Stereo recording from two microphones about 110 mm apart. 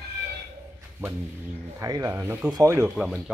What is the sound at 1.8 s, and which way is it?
Speech, 30° right (ahead or behind).